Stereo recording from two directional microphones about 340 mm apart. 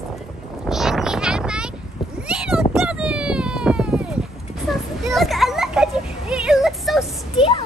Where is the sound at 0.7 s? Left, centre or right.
Centre.